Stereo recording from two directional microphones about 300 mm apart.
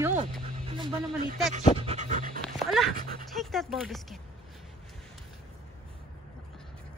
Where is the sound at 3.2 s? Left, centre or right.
Centre.